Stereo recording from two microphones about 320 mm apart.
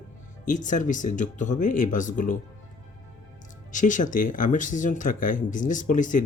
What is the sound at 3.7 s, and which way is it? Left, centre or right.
Speech, left.